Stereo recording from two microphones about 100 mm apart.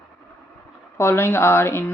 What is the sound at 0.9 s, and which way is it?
Speech, 25° left (ahead or behind).